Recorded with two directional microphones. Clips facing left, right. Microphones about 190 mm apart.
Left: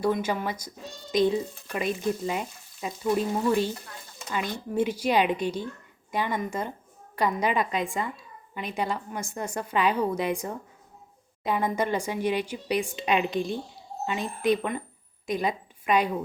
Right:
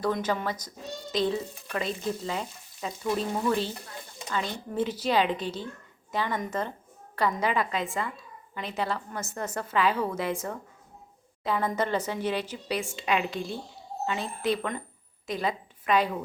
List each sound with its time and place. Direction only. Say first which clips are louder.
0.0 s a woman's voice: left 2 dB; 10° left (ahead or behind)